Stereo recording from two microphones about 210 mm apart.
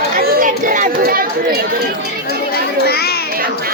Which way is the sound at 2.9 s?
50° left (ahead or behind).